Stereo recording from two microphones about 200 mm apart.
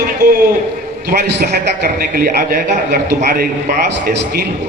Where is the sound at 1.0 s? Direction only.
50° right (ahead or behind).